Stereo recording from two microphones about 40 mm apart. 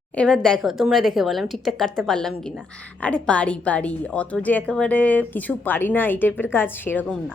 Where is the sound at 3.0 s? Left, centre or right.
Left.